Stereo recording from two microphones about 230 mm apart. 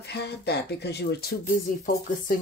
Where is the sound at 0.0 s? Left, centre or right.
Left.